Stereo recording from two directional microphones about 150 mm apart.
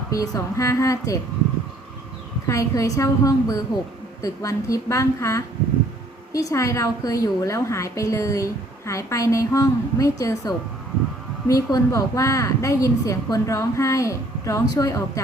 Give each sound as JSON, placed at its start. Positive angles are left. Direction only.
{"t": 0.1, "sound": "a woman's voice", "side_deg": 20}
{"t": 2.5, "sound": "a woman's voice", "side_deg": 20}